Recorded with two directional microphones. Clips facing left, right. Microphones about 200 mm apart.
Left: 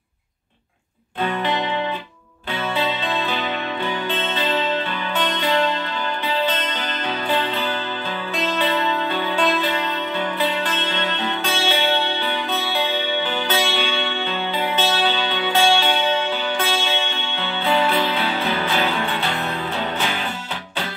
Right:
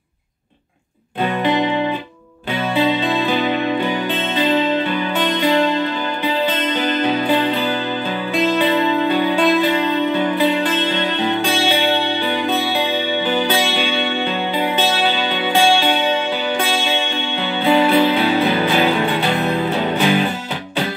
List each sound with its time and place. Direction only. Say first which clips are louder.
1.2 s music: right 5 dB; 15° right (ahead or behind)